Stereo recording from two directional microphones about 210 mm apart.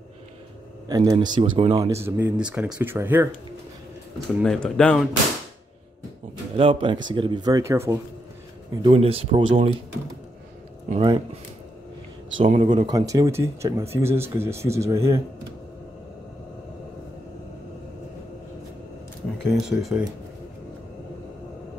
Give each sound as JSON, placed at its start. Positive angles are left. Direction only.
{"t": 0.8, "sound": "speech", "side_deg": -20}
{"t": 4.4, "sound": "speech", "side_deg": 0}
{"t": 6.5, "sound": "speech", "side_deg": -25}
{"t": 8.8, "sound": "speech", "side_deg": -25}
{"t": 10.9, "sound": "speech", "side_deg": -25}
{"t": 12.4, "sound": "speech", "side_deg": -25}
{"t": 19.3, "sound": "speech", "side_deg": 0}